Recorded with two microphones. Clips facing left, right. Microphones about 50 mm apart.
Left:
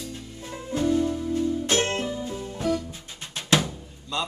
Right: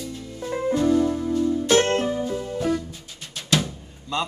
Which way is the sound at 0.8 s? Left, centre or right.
Right.